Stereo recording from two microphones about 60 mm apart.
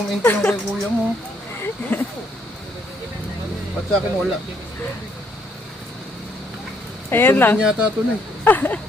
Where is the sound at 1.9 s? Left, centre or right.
Left.